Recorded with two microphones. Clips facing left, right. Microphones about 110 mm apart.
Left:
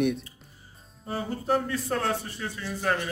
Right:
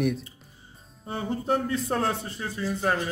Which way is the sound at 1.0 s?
25° right (ahead or behind).